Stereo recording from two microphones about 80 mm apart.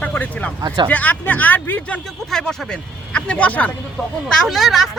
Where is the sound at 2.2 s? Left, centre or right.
Centre.